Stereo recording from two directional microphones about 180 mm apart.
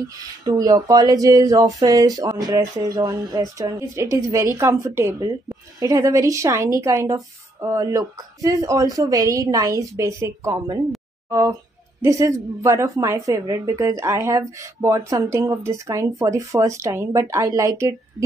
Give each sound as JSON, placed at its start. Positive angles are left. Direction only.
{"t": 0.5, "sound": "a woman's voice", "side_deg": -20}